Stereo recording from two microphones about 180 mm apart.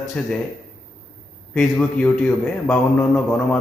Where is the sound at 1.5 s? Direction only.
5° left (ahead or behind).